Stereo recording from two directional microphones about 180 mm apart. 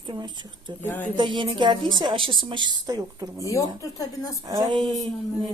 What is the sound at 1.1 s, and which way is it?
Speech, 25° right (ahead or behind).